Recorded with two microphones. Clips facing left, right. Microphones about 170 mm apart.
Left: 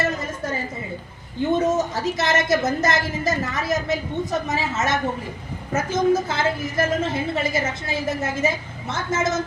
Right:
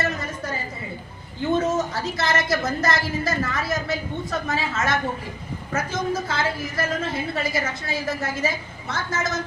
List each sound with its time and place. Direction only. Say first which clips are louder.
1.5 s a woman's voice: left 1 dB; 20° left (ahead or behind)